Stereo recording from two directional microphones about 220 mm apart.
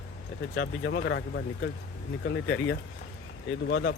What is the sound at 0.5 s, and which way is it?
Speech, 55° left (ahead or behind).